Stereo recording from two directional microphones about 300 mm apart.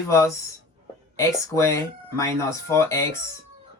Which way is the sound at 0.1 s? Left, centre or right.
Centre.